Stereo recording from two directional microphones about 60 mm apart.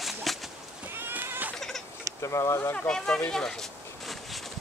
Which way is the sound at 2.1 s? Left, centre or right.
Left.